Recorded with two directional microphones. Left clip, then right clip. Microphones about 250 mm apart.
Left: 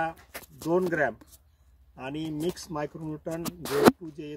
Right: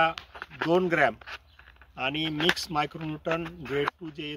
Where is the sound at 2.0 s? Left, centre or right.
Centre.